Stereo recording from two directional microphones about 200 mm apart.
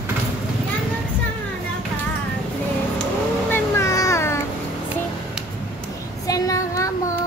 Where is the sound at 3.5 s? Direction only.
15° left (ahead or behind).